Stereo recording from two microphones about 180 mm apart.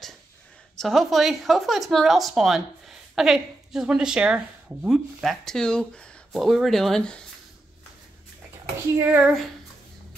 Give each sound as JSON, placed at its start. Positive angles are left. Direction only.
{"t": 0.7, "sound": "speech", "side_deg": 0}
{"t": 8.9, "sound": "speech", "side_deg": -10}